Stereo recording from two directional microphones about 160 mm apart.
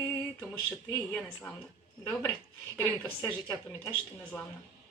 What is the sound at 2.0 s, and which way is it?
Female singing, 15° left (ahead or behind).